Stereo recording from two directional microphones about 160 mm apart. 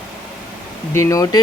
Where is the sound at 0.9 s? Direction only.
20° left (ahead or behind).